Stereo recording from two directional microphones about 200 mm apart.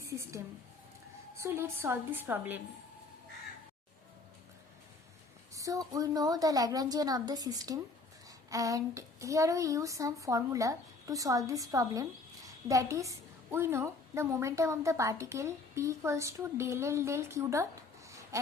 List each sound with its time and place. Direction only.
0.0 s a sound: 15° right (ahead or behind)
1.4 s a woman's voice: 10° right (ahead or behind)
5.5 s a woman's voice: 15° right (ahead or behind)